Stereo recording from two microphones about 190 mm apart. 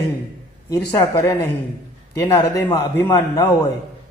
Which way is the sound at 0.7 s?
20° left (ahead or behind).